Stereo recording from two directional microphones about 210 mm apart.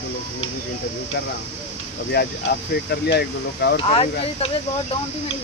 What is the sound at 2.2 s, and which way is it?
Speech, 50° left (ahead or behind).